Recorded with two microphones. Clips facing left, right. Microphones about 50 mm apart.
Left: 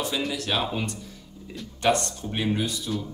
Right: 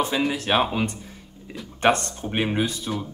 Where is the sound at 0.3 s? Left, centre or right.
Right.